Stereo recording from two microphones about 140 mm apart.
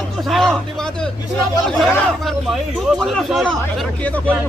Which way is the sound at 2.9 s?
Centre (ahead or behind).